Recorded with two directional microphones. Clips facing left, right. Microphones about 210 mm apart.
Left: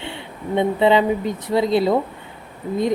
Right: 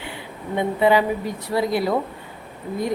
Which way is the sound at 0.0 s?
25° left (ahead or behind).